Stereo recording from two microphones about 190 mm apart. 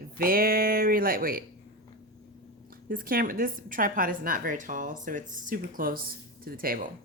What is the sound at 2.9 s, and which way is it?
A woman's voice, 50° right (ahead or behind).